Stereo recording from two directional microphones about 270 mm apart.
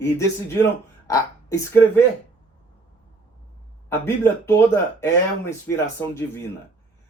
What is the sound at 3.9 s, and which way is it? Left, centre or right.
Speech, centre.